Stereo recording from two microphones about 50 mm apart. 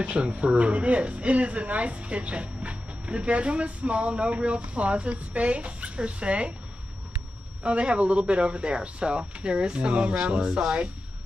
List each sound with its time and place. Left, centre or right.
0.0 s speech: right
7.6 s speech: right